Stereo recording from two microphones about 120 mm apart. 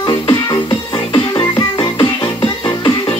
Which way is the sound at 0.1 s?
35° left (ahead or behind).